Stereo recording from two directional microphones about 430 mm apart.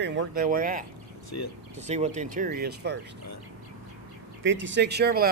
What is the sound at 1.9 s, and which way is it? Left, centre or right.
Speech, centre.